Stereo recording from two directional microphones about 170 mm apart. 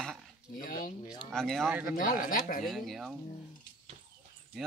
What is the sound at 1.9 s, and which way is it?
Speech, 55° left (ahead or behind).